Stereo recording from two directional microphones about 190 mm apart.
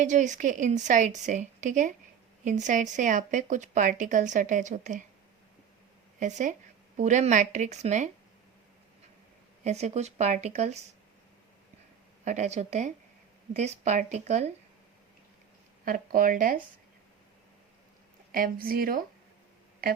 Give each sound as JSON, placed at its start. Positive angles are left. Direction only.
{"t": 0.0, "sound": "speech", "side_deg": -40}
{"t": 6.1, "sound": "speech", "side_deg": -40}
{"t": 9.6, "sound": "speech", "side_deg": -35}
{"t": 12.2, "sound": "speech", "side_deg": -40}
{"t": 15.8, "sound": "speech", "side_deg": -45}
{"t": 18.3, "sound": "speech", "side_deg": -50}